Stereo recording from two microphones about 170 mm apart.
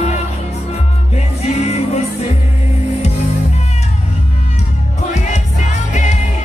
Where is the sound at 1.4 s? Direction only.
40° left (ahead or behind).